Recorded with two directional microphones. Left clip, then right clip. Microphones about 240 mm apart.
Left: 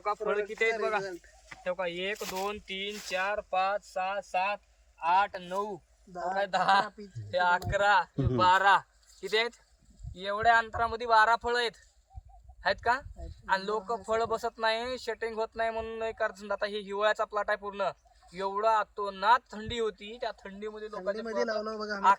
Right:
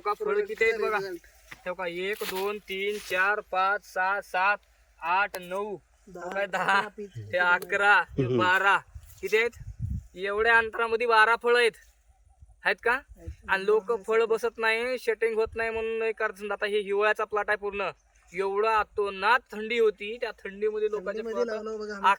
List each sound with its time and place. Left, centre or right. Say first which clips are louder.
0.0 s speech: right 3 dB; centre
6.6 s speech: even; right
10.2 s speech: right 2 dB; right
21.2 s speech: right 1 dB; centre